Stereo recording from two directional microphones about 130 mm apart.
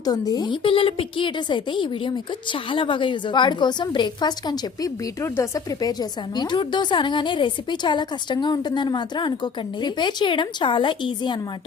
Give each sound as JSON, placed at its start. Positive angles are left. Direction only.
{"t": 0.0, "sound": "a woman's voice", "side_deg": 30}